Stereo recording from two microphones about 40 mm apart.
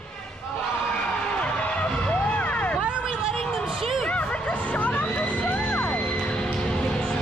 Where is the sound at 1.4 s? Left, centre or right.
Left.